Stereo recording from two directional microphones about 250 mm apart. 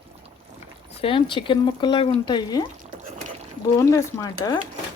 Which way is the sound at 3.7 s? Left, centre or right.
Centre.